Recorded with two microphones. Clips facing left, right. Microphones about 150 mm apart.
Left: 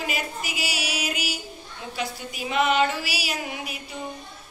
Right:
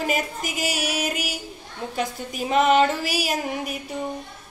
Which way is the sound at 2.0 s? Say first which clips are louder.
Right 4 dB; 40° right (ahead or behind).